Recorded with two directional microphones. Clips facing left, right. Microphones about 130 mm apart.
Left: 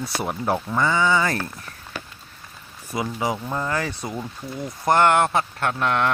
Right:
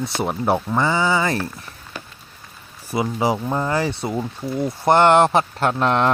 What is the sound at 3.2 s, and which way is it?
Speech, 30° right (ahead or behind).